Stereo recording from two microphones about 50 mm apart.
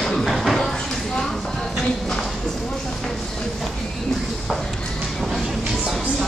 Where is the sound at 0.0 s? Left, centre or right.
Centre.